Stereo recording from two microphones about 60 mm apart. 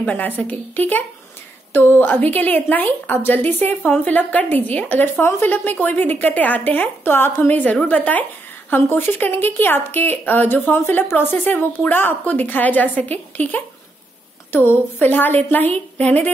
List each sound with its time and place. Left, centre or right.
0.1 s a woman's voice: left
0.5 s speech: left
3.9 s a woman's voice: left